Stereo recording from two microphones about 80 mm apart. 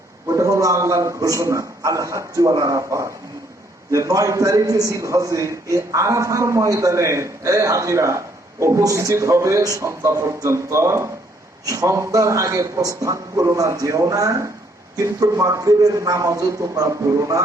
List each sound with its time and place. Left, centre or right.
0.3 s a man's voice: right